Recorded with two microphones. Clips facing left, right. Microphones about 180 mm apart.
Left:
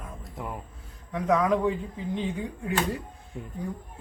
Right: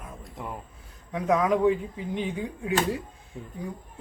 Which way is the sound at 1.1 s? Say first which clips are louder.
Even; 10° right (ahead or behind).